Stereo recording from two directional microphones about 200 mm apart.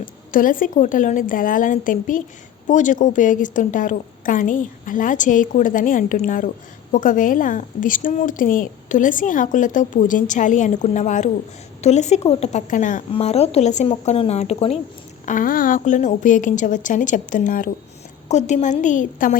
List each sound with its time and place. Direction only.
0.0 s a woman's voice: 45° left (ahead or behind)
15.3 s a woman's voice: 45° left (ahead or behind)